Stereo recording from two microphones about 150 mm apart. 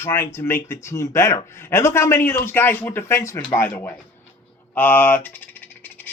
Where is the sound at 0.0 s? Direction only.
15° left (ahead or behind).